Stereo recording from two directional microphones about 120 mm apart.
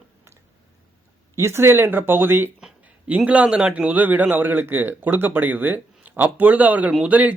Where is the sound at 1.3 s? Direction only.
20° right (ahead or behind).